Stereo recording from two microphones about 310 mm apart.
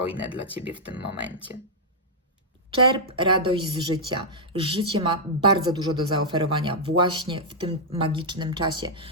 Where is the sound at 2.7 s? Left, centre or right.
Centre.